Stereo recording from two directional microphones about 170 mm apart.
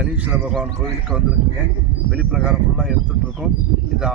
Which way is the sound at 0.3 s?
5° right (ahead or behind).